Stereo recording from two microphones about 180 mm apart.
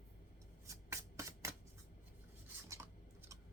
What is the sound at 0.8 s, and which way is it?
Shuffling cards, 15° right (ahead or behind).